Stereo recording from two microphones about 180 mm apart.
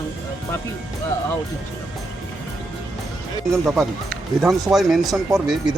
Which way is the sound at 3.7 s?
Centre (ahead or behind).